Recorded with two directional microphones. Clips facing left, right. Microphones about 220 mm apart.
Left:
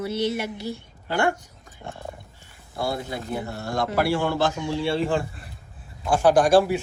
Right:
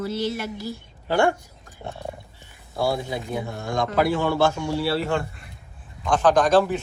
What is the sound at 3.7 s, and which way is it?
A woman's voice, 5° left (ahead or behind).